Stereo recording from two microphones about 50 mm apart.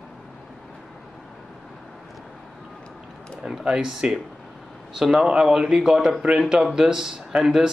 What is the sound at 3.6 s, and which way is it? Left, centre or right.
Speech, centre.